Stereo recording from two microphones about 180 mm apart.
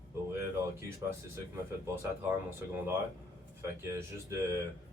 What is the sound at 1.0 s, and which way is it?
Speech, 10° right (ahead or behind).